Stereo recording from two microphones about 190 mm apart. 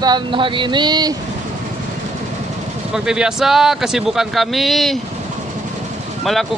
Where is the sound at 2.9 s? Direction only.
5° right (ahead or behind).